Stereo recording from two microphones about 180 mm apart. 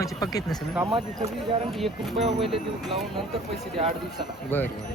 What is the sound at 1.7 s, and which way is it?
Speech, centre (ahead or behind).